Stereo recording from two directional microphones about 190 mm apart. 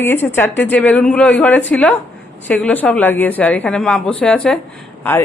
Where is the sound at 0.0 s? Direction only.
10° left (ahead or behind).